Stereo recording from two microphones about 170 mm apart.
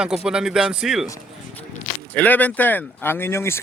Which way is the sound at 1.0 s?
20° left (ahead or behind).